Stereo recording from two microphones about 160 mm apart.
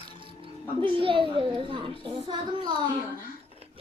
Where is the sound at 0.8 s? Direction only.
35° right (ahead or behind).